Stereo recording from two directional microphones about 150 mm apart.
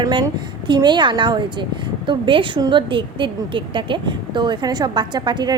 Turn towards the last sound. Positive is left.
turn(degrees=-30)  # may be behind; listen again after turning